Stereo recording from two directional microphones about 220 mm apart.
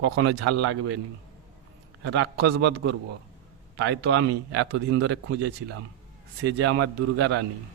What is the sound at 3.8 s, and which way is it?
Speech, 70° right (ahead or behind).